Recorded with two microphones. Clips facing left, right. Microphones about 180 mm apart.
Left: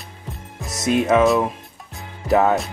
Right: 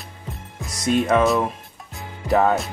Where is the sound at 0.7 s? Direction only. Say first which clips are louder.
Left 1 dB; 25° left (ahead or behind).